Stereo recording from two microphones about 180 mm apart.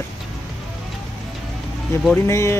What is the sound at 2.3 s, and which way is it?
Speech, 15° left (ahead or behind).